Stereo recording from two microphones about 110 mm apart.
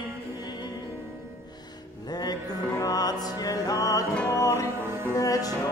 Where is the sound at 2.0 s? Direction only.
40° left (ahead or behind).